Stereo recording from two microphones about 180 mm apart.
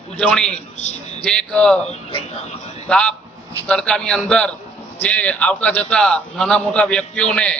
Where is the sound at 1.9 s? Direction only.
30° left (ahead or behind).